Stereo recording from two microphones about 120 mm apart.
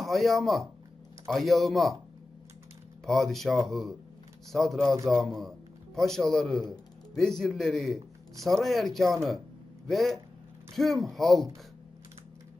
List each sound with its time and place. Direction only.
0.0 s speech: centre (ahead or behind)
3.1 s speech: centre (ahead or behind)